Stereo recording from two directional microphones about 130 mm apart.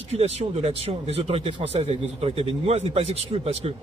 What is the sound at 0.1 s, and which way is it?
A man's voice, 55° right (ahead or behind).